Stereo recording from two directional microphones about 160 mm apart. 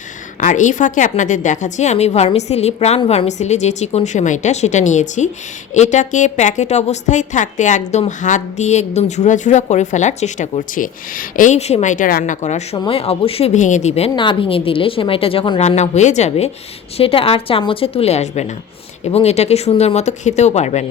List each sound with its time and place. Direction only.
0.3 s a woman's voice: 50° left (ahead or behind)
12.7 s a woman's voice: 30° left (ahead or behind)